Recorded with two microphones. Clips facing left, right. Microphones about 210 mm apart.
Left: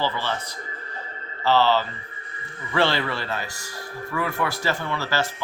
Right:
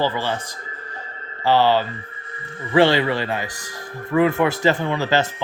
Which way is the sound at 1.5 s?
15° right (ahead or behind).